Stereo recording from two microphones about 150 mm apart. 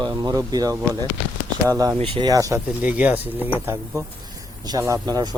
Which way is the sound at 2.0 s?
35° right (ahead or behind).